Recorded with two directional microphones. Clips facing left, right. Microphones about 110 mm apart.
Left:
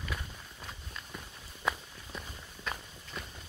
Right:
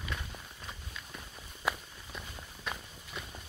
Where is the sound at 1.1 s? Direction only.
Centre (ahead or behind).